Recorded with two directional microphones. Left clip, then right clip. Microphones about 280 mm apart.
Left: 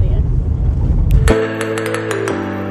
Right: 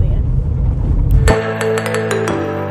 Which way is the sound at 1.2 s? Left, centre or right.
Centre.